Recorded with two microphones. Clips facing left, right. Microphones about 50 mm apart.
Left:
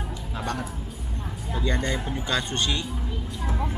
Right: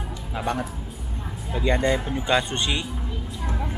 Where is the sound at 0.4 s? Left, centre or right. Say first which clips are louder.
Right 4 dB; centre.